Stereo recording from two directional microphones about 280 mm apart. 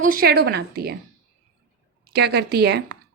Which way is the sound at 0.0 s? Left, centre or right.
Right.